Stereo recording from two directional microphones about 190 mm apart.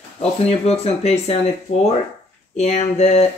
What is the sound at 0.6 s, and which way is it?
A woman's voice, 35° left (ahead or behind).